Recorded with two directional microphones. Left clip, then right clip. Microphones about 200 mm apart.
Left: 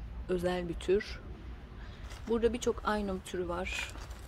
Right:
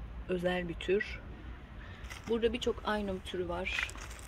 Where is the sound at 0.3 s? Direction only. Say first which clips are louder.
Even; 5° left (ahead or behind).